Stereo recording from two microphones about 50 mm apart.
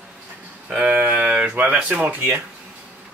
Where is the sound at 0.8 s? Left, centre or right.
Right.